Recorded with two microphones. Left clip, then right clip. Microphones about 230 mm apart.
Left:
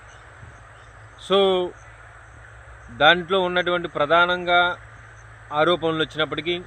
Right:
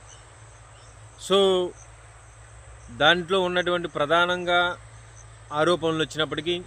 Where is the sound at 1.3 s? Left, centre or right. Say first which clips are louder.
Left 2 dB; centre.